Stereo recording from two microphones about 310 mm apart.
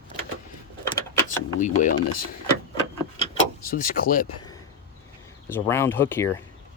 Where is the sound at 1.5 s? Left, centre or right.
Left.